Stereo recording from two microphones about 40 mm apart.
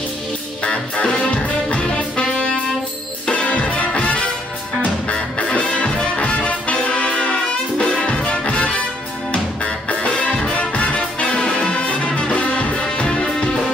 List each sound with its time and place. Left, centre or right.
0.7 s music: left
3.3 s music: left
5.6 s music: left
7.8 s music: centre
9.8 s music: left